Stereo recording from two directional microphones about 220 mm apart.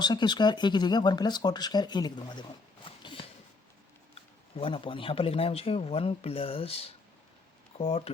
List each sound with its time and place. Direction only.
0.0 s speech: 20° left (ahead or behind)
2.8 s a sound: 20° left (ahead or behind)
4.1 s speech: 25° left (ahead or behind)